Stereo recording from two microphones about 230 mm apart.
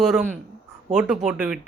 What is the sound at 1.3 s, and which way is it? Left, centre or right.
Speech, centre.